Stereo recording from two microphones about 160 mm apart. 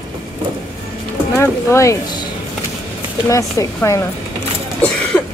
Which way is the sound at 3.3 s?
20° left (ahead or behind).